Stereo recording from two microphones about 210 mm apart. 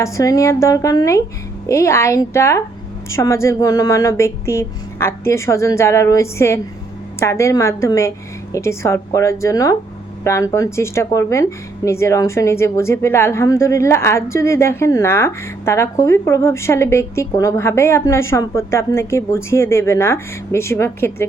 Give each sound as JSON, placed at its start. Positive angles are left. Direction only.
{"t": 0.0, "sound": "a woman's voice", "side_deg": 15}